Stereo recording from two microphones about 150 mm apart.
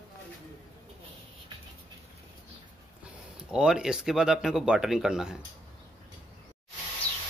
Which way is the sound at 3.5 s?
5° right (ahead or behind).